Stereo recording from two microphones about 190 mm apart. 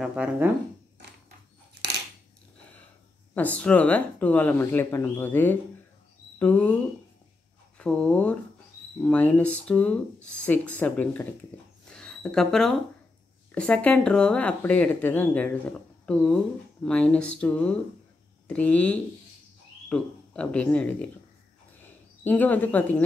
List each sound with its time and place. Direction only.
0.0 s speech: 5° right (ahead or behind)
3.3 s speech: 10° left (ahead or behind)
11.5 s dog: 10° left (ahead or behind)
11.9 s a sound: 5° left (ahead or behind)
13.6 s speech: 5° left (ahead or behind)
16.8 s speech: 5° left (ahead or behind)